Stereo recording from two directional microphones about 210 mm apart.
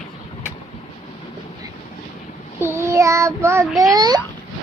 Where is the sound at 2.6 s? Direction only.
15° right (ahead or behind).